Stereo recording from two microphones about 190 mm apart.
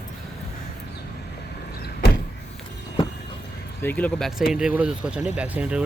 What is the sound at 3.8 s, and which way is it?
Speech, 10° left (ahead or behind).